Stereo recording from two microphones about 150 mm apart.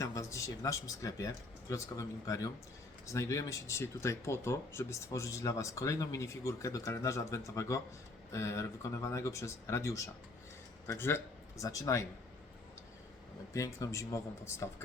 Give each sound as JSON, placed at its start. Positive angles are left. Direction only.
{"t": 0.0, "sound": "a man's voice", "side_deg": 20}
{"t": 13.5, "sound": "speech", "side_deg": 20}